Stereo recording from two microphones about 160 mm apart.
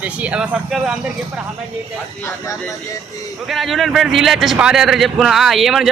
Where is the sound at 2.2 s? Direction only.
20° left (ahead or behind).